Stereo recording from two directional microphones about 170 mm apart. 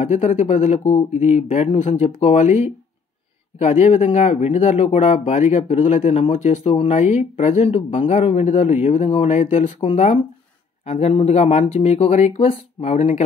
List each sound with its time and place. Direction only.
0.0 s speech: 45° left (ahead or behind)
5.9 s speech: 45° left (ahead or behind)